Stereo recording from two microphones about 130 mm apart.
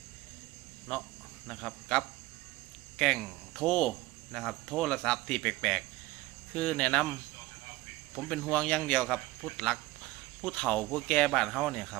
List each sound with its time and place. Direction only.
1.5 s a man's voice: centre (ahead or behind)